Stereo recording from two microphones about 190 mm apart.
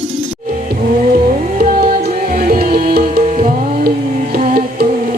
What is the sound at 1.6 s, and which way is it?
Music, 50° right (ahead or behind).